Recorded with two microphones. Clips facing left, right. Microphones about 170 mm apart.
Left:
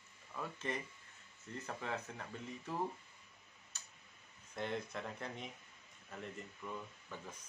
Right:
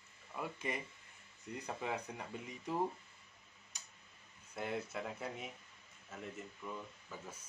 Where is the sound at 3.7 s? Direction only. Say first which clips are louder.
Right 1 dB; 15° right (ahead or behind).